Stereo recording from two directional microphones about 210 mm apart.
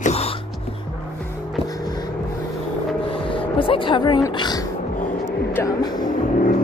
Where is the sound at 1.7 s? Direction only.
20° left (ahead or behind).